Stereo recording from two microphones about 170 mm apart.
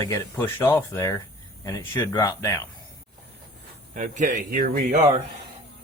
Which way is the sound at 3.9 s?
50° right (ahead or behind).